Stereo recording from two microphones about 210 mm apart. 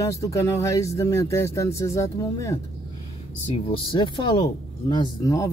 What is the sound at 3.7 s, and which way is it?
Speech, 25° left (ahead or behind).